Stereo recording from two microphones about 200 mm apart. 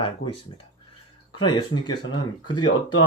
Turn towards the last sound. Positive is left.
turn(degrees=20)  # may be behind; listen again after turning